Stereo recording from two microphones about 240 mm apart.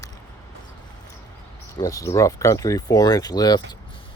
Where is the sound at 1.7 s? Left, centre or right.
Centre.